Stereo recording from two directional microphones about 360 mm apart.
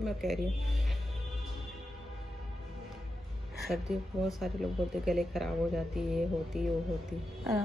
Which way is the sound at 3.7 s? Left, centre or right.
Centre.